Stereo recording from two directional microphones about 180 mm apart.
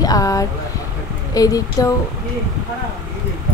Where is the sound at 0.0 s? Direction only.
20° left (ahead or behind).